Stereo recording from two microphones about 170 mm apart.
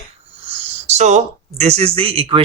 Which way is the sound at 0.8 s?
40° right (ahead or behind).